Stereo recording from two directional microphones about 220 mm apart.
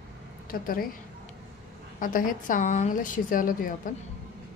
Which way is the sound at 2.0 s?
40° left (ahead or behind).